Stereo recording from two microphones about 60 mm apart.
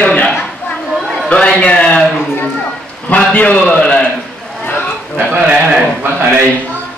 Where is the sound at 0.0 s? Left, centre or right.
Left.